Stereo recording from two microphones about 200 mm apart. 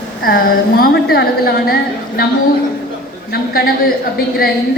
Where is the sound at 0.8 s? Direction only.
50° left (ahead or behind).